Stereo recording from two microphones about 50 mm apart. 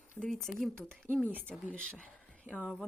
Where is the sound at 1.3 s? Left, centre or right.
Right.